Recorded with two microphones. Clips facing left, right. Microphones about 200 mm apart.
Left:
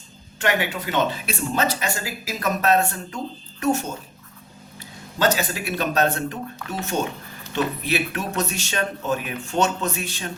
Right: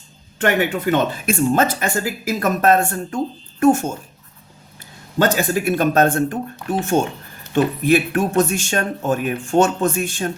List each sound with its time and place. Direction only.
0.3 s speech: 50° right (ahead or behind)
5.2 s speech: 50° right (ahead or behind)